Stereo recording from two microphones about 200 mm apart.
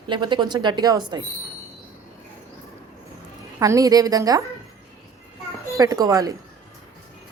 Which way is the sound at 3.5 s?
15° right (ahead or behind).